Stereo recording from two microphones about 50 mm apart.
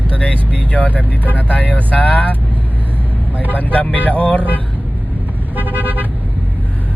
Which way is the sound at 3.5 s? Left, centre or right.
Left.